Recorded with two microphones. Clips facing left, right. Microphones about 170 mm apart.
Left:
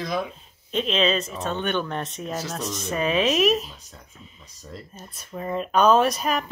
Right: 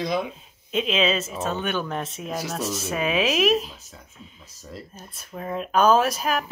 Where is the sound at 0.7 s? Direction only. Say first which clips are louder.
Even; 5° right (ahead or behind).